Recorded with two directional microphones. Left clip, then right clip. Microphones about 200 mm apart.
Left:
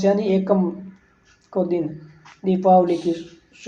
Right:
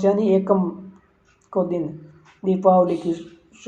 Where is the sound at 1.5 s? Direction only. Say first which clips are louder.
Left 1 dB; 25° right (ahead or behind).